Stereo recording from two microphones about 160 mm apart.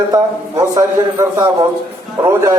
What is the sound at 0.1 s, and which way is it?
A man's voice, 25° right (ahead or behind).